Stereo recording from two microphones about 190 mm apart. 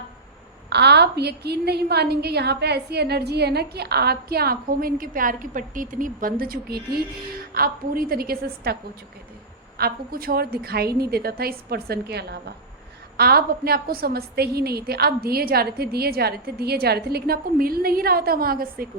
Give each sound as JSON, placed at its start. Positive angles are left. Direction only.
{"t": 0.7, "sound": "a woman's voice", "side_deg": -60}
{"t": 9.7, "sound": "a woman's voice", "side_deg": -50}